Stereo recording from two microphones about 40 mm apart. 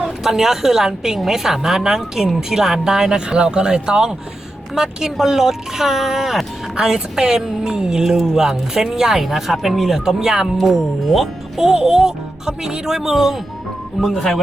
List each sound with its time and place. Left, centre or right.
0.2 s speech: centre
14.2 s speech: centre